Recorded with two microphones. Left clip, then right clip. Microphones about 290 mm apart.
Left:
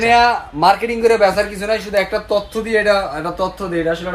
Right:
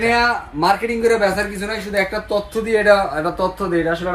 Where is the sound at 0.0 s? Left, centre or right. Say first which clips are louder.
Left 4 dB; left.